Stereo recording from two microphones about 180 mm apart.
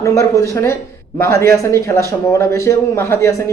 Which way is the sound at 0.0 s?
15° left (ahead or behind).